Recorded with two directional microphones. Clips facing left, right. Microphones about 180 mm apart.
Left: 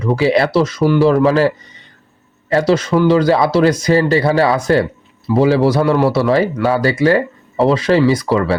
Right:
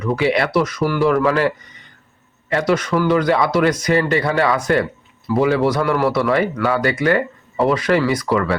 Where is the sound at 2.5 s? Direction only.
30° left (ahead or behind).